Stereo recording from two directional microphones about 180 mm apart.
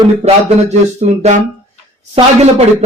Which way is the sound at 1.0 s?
40° right (ahead or behind).